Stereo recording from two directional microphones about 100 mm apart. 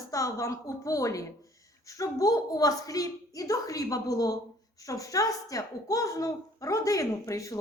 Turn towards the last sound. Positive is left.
turn(degrees=35)  # may be behind; listen again after turning